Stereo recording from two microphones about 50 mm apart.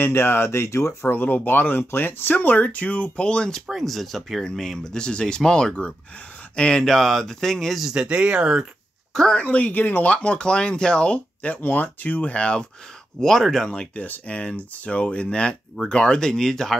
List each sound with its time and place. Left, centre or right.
0.0 s speech: left
1.0 s speech: left; by 3.6 s centre
3.6 s speech: centre
6.8 s speech: centre
7.8 s speech: centre
9.1 s speech: centre
9.4 s speech: left
10.0 s speech: left
11.4 s speech: left
13.2 s speech: centre
13.7 s speech: left